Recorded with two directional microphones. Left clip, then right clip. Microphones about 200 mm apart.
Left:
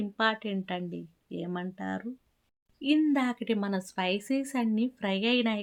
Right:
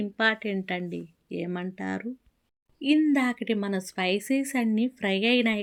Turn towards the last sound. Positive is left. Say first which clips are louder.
# right 4 dB
turn(degrees=0)  # may be behind; listen again after turning